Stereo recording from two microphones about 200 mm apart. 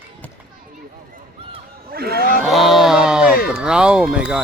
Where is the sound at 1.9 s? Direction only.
50° right (ahead or behind).